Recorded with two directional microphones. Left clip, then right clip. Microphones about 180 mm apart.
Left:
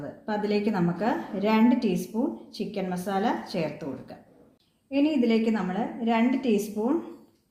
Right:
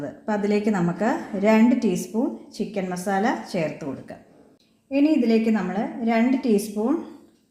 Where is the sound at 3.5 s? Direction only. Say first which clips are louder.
Right 4 dB; 25° right (ahead or behind).